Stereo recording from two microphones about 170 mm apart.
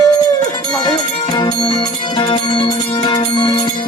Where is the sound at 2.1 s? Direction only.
25° left (ahead or behind).